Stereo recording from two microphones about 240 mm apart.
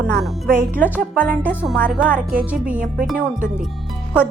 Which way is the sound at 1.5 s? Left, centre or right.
Centre.